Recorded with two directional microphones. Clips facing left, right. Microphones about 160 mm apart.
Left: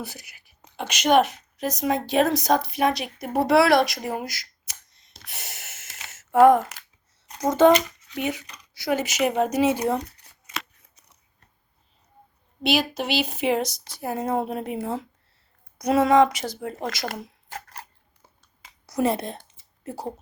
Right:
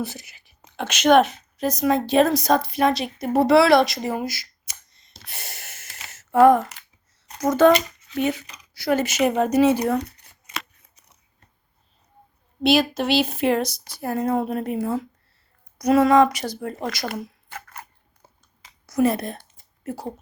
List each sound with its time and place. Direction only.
0.0 s a woman's voice: 15° left (ahead or behind)
5.4 s a sound: 20° left (ahead or behind)
7.4 s a woman's voice: 20° left (ahead or behind)
12.6 s a woman's voice: 15° left (ahead or behind)
17.1 s a sound: 35° left (ahead or behind)
18.9 s speech: 30° left (ahead or behind)